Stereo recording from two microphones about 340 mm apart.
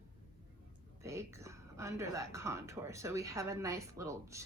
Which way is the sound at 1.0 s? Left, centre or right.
Centre.